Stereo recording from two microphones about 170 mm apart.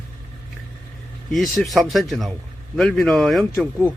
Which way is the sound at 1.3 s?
Centre (ahead or behind).